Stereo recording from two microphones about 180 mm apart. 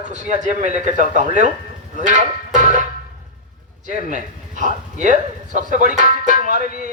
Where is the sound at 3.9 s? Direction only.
45° right (ahead or behind).